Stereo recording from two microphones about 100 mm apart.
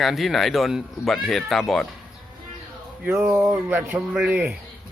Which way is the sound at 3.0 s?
20° right (ahead or behind).